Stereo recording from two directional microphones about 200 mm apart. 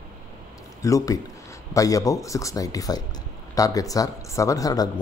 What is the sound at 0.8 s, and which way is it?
Speech, 15° left (ahead or behind).